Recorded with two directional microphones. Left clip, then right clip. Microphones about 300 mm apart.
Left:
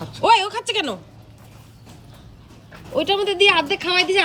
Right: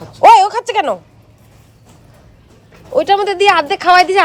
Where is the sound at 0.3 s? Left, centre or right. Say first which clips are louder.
Right 9 dB; centre.